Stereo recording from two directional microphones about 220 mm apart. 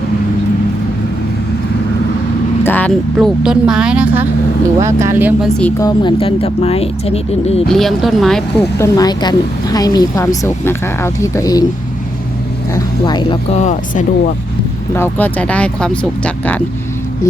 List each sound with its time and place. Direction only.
2.6 s speech: 5° left (ahead or behind); by 5.5 s 10° right (ahead or behind)
5.8 s speech: 20° left (ahead or behind)
7.7 s speech: centre (ahead or behind)
8.8 s speech: 15° left (ahead or behind)
12.7 s speech: 20° left (ahead or behind)
14.9 s speech: 10° left (ahead or behind)